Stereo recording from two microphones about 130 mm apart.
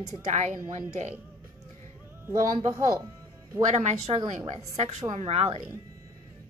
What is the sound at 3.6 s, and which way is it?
A woman's voice, 60° right (ahead or behind).